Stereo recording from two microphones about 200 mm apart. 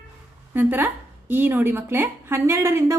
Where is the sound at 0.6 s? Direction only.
10° right (ahead or behind).